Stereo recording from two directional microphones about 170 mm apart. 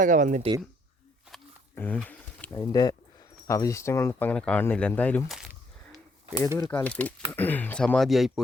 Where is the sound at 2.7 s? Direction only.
20° left (ahead or behind).